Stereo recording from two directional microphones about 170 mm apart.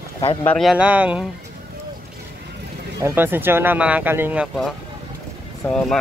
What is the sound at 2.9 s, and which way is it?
Speech, 15° right (ahead or behind).